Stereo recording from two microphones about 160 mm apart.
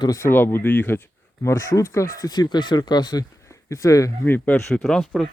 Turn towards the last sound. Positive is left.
turn(degrees=0)  # may be behind; listen again after turning